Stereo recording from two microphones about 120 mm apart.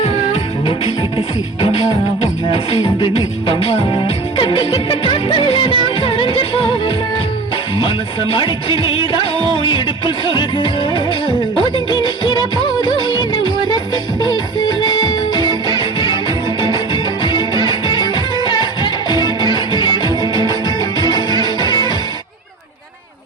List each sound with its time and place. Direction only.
0.0 s music: 50° left (ahead or behind)
2.5 s music: 45° left (ahead or behind)
11.7 s music of bollywood: 40° left (ahead or behind)
15.4 s music: 40° left (ahead or behind)